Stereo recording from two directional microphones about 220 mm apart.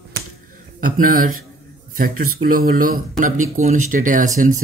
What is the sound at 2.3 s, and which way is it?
Speech, 40° right (ahead or behind).